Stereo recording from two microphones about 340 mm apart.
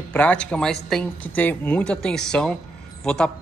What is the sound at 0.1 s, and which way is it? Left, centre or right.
A man's voice, centre.